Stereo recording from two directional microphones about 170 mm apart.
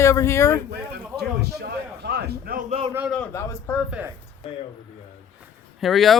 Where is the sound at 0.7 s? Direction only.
70° right (ahead or behind).